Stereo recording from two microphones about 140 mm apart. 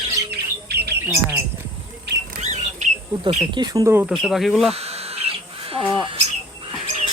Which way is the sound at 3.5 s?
30° right (ahead or behind).